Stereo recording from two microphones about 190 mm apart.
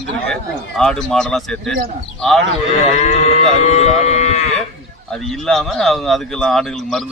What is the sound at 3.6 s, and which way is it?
Livestock, 35° left (ahead or behind).